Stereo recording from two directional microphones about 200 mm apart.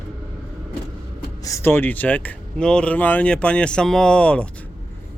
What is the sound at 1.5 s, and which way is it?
Speech, 15° left (ahead or behind).